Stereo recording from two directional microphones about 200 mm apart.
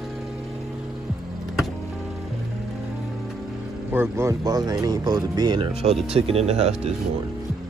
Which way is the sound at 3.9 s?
10° right (ahead or behind).